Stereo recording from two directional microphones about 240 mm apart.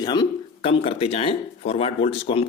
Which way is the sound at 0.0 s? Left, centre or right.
Centre.